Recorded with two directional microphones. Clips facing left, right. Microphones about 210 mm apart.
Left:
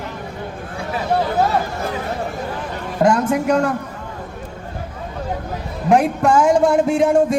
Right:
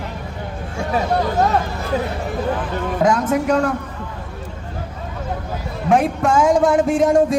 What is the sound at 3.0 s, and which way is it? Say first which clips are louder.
Speech: left 2 dB; centre (ahead or behind).